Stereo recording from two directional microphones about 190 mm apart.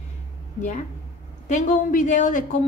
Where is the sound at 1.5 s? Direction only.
40° left (ahead or behind).